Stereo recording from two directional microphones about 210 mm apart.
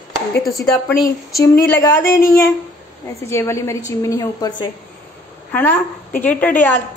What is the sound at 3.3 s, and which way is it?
A woman's voice, 15° left (ahead or behind).